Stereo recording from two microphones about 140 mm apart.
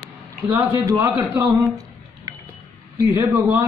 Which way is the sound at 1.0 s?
20° right (ahead or behind).